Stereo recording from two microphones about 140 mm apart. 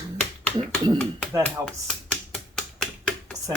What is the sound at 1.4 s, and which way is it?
Speech, 5° left (ahead or behind).